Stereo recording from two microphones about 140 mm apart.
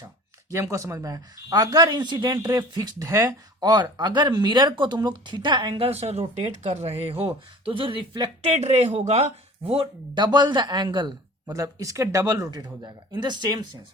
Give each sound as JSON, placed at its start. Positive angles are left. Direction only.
{"t": 0.5, "sound": "a man's voice", "side_deg": -20}
{"t": 8.5, "sound": "a man's voice", "side_deg": -50}
{"t": 11.4, "sound": "speech", "side_deg": -20}